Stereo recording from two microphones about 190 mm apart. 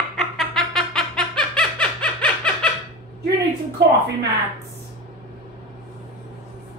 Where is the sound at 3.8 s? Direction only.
65° right (ahead or behind).